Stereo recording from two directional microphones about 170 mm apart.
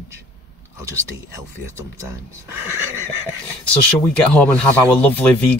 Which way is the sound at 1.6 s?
15° right (ahead or behind).